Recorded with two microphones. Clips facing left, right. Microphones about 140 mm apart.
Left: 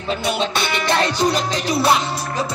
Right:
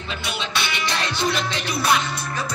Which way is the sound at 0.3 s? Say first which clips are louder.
Left 5 dB; 50° left (ahead or behind).